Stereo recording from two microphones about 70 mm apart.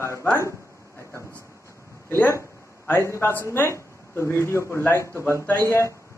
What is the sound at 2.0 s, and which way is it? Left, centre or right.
A man's voice, left.